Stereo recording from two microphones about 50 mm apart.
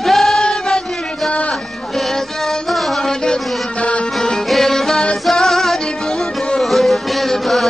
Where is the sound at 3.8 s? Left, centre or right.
Left.